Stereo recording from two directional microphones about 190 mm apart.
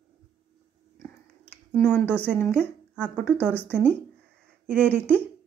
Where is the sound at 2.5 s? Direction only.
5° right (ahead or behind).